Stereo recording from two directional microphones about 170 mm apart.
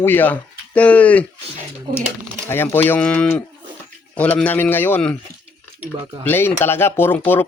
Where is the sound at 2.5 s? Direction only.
15° left (ahead or behind).